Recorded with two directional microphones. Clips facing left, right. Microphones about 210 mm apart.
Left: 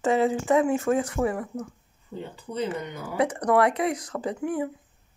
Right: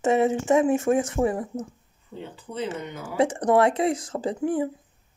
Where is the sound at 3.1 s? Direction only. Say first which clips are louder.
Right 2 dB; 25° right (ahead or behind).